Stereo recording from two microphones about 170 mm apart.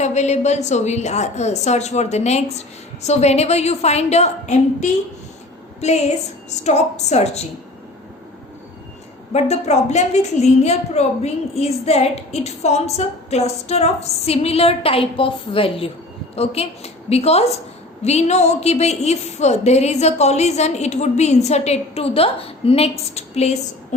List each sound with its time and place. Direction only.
0.0 s a woman's voice: 40° left (ahead or behind)
9.3 s a woman's voice: 40° left (ahead or behind)